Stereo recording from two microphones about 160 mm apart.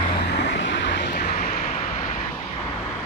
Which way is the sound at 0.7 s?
90° left.